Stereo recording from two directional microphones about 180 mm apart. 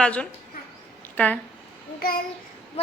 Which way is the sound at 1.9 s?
55° left (ahead or behind).